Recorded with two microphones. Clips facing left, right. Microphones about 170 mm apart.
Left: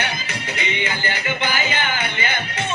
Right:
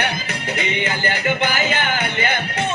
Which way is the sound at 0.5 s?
50° right (ahead or behind).